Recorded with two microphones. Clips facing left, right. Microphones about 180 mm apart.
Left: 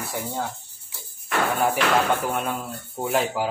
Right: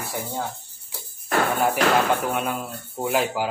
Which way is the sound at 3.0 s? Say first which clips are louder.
Even; centre (ahead or behind).